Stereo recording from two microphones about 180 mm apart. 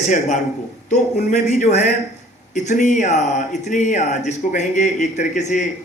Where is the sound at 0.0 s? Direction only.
40° left (ahead or behind).